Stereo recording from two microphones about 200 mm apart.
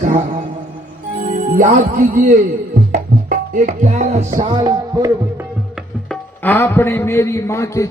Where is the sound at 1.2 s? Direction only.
40° right (ahead or behind).